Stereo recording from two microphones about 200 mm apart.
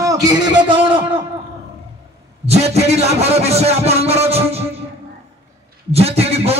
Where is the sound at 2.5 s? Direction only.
30° right (ahead or behind).